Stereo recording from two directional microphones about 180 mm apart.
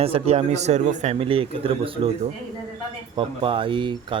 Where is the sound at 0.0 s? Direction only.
35° right (ahead or behind).